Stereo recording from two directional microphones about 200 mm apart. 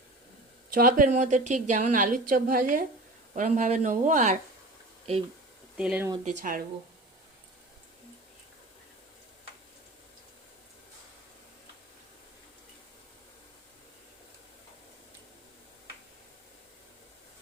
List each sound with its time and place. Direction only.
0.7 s a woman's voice: 45° right (ahead or behind)
5.7 s speech: 5° right (ahead or behind)
6.2 s speech: 45° right (ahead or behind)